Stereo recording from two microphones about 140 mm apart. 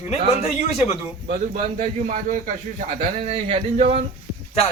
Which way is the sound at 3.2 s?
45° right (ahead or behind).